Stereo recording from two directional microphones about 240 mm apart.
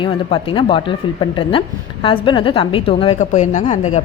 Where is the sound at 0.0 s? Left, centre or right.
Left.